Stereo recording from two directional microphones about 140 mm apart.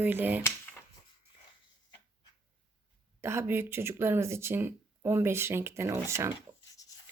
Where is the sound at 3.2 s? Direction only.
20° right (ahead or behind).